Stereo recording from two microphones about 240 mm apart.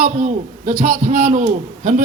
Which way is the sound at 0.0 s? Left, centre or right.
Right.